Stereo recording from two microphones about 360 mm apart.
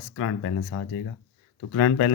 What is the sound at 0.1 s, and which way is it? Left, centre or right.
A man's voice, left.